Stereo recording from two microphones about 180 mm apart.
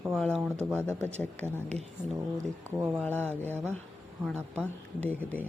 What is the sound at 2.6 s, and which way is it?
Speech, 15° right (ahead or behind).